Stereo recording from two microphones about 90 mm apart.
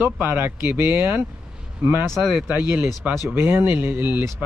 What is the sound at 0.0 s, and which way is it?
Speech, 20° right (ahead or behind).